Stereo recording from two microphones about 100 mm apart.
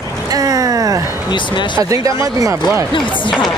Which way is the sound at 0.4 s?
35° right (ahead or behind).